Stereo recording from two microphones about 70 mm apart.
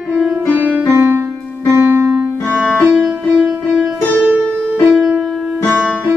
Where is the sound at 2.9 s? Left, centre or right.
Centre.